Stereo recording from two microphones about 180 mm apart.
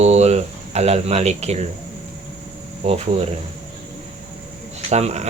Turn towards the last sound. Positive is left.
turn(degrees=-40)  # may be behind; listen again after turning